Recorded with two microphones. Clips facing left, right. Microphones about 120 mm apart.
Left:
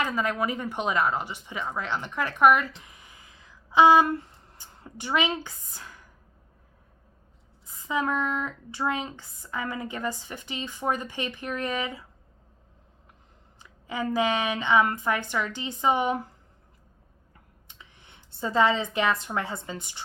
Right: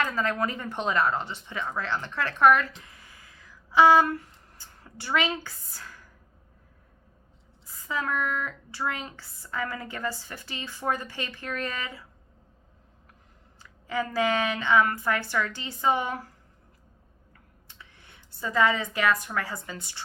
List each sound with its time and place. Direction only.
0.0 s speech: 15° left (ahead or behind)
7.8 s speech: 20° left (ahead or behind)
13.6 s speech: 20° left (ahead or behind)
17.7 s speech: 20° left (ahead or behind)